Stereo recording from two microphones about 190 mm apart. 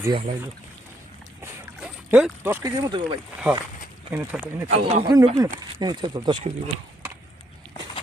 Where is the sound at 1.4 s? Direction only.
5° right (ahead or behind).